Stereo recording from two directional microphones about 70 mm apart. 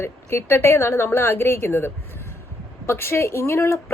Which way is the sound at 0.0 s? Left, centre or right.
Left.